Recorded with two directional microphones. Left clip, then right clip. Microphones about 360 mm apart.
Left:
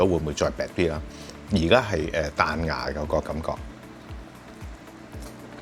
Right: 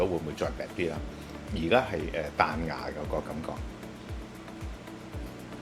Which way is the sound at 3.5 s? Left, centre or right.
Left.